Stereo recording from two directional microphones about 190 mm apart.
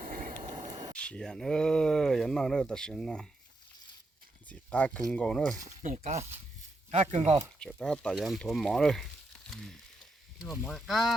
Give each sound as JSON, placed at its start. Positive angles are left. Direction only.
{"t": 0.0, "sound": "vehicle", "side_deg": -50}
{"t": 0.5, "sound": "a sound", "side_deg": -35}
{"t": 0.9, "sound": "speech", "side_deg": 5}
{"t": 4.4, "sound": "speech", "side_deg": 5}
{"t": 5.6, "sound": "speech", "side_deg": -40}
{"t": 7.6, "sound": "speech", "side_deg": 5}
{"t": 9.5, "sound": "wild animals", "side_deg": 0}
{"t": 10.6, "sound": "speech", "side_deg": 0}